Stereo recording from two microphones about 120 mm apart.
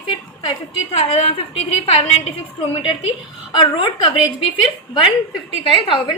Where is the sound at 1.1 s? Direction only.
55° left (ahead or behind).